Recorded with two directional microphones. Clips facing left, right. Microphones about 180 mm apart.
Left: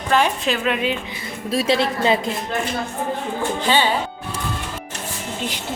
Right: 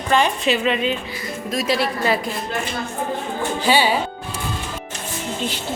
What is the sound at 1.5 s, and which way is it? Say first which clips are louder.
Speech: left 2 dB; 30° left (ahead or behind).